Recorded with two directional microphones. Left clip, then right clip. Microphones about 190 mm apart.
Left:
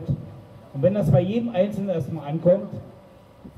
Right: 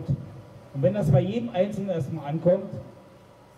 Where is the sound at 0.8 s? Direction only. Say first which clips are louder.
Left 3 dB; 20° left (ahead or behind).